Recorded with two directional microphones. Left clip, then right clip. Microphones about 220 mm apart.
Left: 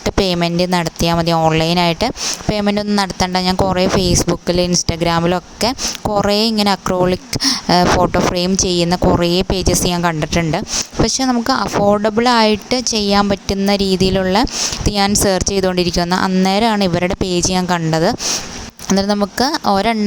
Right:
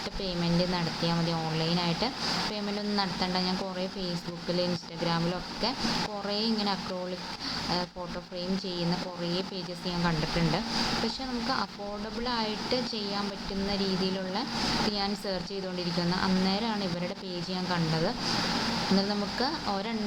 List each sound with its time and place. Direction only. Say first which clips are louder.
0.2 s a woman's voice: left 14 dB; 55° left (ahead or behind)